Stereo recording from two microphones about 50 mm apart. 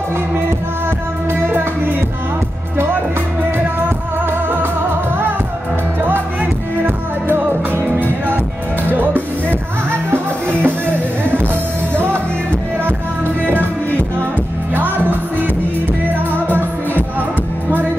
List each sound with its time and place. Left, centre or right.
1.3 s music: right
6.8 s music: right
8.9 s music: right
14.7 s music: right